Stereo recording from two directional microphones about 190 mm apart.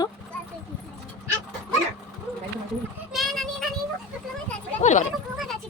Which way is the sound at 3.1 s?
Centre (ahead or behind).